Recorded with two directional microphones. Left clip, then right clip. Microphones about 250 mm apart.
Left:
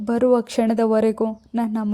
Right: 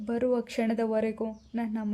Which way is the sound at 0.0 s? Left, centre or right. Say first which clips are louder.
Left 10 dB; left.